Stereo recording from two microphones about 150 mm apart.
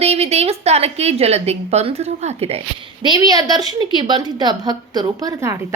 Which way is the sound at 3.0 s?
25° right (ahead or behind).